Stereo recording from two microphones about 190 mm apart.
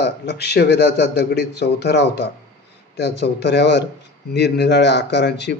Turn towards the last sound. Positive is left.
turn(degrees=65)  # may be behind; listen again after turning